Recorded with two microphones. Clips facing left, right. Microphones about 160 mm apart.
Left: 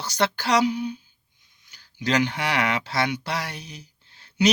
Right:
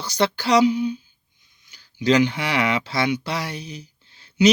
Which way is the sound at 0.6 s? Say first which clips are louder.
Right 5 dB; 45° left (ahead or behind).